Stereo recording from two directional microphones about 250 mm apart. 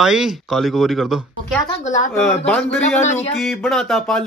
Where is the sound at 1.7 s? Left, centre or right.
Left.